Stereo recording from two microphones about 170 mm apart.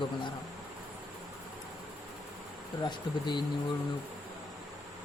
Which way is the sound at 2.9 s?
25° left (ahead or behind).